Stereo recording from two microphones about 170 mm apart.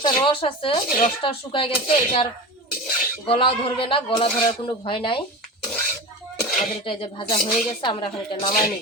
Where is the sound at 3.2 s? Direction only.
30° left (ahead or behind).